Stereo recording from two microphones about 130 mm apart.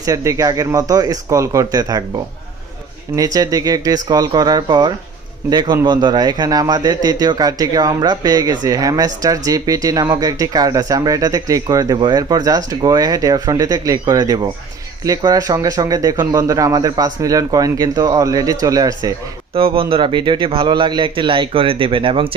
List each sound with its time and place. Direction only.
0.0 s a man's voice: 25° right (ahead or behind)
19.5 s speech: 45° right (ahead or behind)